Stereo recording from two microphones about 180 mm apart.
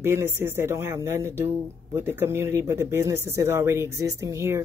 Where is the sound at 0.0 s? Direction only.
15° right (ahead or behind).